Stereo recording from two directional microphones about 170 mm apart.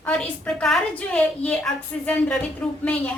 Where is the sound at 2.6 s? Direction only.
5° left (ahead or behind).